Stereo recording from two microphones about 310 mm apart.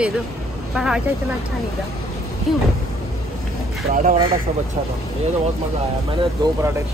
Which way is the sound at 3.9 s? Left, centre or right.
Right.